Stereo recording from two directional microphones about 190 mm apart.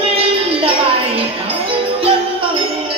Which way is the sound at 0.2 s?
30° right (ahead or behind).